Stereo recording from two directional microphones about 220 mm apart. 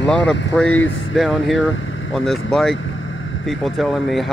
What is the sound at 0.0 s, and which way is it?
Speech, 5° left (ahead or behind).